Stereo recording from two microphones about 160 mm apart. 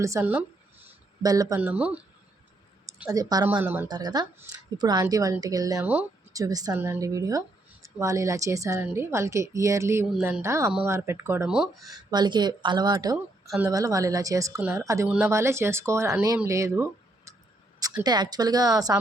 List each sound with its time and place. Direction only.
0.0 s speech: 15° right (ahead or behind)
1.6 s speech: 10° right (ahead or behind)
3.1 s speech: 25° right (ahead or behind)
3.6 s speech: 10° right (ahead or behind)
3.8 s speech: 25° right (ahead or behind)
5.8 s speech: 10° right (ahead or behind)
6.3 s speech: 20° right (ahead or behind)
11.4 s speech: 5° right (ahead or behind)
11.9 s speech: 25° right (ahead or behind)